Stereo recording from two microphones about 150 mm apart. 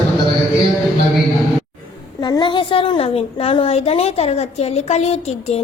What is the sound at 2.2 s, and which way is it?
A woman's voice, 30° left (ahead or behind).